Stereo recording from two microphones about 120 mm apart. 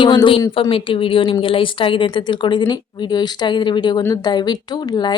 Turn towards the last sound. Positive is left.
turn(degrees=35)  # may be behind; listen again after turning